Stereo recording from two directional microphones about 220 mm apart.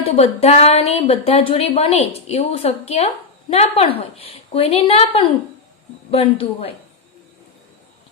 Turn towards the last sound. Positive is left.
turn(degrees=25)  # may be behind; listen again after turning